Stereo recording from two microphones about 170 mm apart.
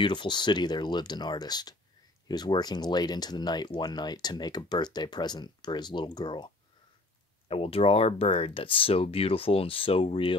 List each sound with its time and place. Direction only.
0.0 s speech: 25° left (ahead or behind)